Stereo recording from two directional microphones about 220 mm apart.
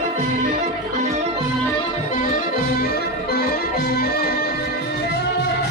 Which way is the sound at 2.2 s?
40° left (ahead or behind).